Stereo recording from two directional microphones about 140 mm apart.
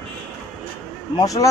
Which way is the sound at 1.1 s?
25° left (ahead or behind).